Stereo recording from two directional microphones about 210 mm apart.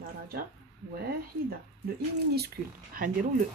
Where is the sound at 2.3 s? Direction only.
45° right (ahead or behind).